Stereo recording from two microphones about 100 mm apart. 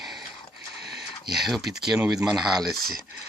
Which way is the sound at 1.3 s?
Centre (ahead or behind).